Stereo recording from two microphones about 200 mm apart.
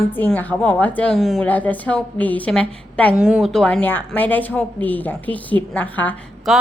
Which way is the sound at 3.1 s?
5° right (ahead or behind).